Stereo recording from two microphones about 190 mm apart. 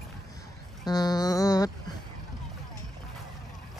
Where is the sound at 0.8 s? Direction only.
20° left (ahead or behind).